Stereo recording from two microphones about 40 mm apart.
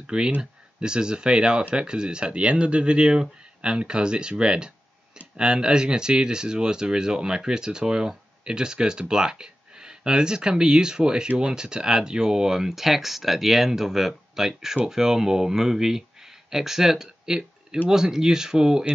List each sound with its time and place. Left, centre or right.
0.0 s speech: right